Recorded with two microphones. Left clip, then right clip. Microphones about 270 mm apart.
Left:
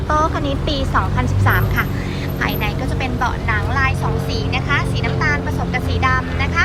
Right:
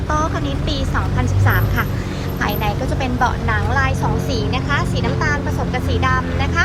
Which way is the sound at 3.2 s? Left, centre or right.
Centre.